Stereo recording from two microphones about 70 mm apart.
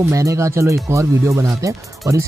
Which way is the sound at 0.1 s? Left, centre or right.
Right.